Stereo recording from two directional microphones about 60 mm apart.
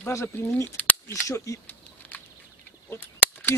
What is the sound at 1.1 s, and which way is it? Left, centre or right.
Speech, left.